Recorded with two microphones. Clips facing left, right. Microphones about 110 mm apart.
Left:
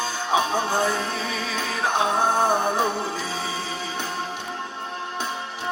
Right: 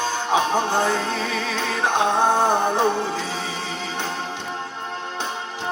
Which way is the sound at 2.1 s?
20° right (ahead or behind).